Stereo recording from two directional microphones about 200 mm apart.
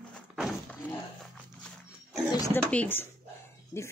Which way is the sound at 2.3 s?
15° left (ahead or behind).